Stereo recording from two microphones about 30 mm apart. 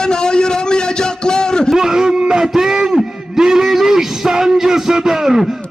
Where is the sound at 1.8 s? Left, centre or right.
Centre.